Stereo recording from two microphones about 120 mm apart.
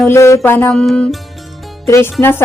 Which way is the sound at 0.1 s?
25° left (ahead or behind).